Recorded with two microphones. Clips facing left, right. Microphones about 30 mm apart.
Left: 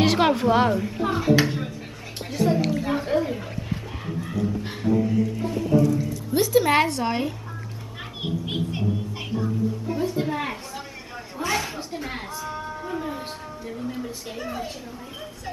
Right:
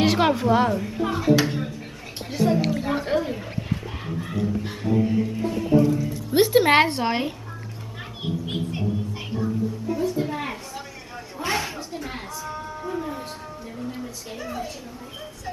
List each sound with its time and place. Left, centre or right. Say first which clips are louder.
0.0 s a woman's voice: even; centre
6.3 s a woman's voice: right 2 dB; right
8.0 s children playing: even; centre
9.9 s a woman's voice: right 2 dB; centre
10.2 s a sound: left 1 dB; centre
11.7 s speech: left 1 dB; centre